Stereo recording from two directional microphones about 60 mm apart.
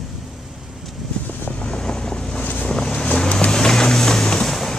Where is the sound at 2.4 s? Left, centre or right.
Left.